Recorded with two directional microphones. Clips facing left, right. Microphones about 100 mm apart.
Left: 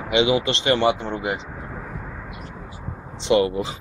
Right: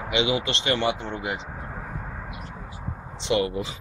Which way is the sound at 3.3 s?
40° left (ahead or behind).